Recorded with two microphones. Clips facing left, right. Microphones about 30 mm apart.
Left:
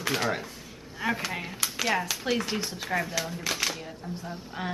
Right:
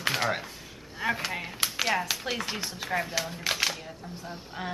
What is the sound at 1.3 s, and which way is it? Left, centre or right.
A woman's voice, centre.